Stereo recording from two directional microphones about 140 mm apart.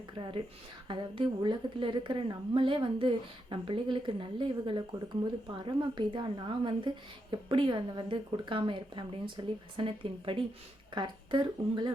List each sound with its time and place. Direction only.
0.2 s a woman's voice: 40° right (ahead or behind)